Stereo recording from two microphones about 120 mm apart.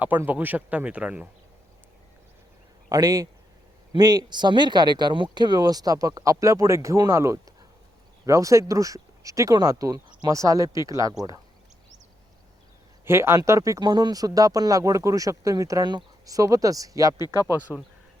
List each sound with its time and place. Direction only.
0.0 s speech: 15° right (ahead or behind)
2.9 s speech: 30° right (ahead or behind)
13.1 s speech: 20° right (ahead or behind)
17.2 s speech: 35° left (ahead or behind)